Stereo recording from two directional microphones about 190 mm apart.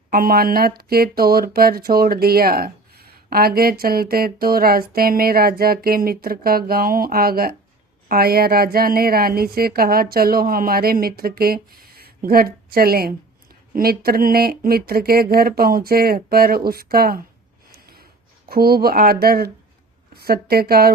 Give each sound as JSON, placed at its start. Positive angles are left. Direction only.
{"t": 0.1, "sound": "speech", "side_deg": -50}
{"t": 17.7, "sound": "a sound", "side_deg": -55}
{"t": 18.4, "sound": "a woman's voice", "side_deg": -55}